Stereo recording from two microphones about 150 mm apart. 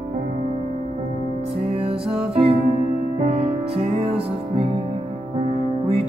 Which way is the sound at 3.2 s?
45° right (ahead or behind).